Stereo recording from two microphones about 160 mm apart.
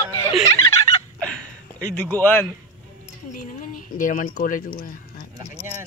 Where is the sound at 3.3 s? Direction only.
60° left (ahead or behind).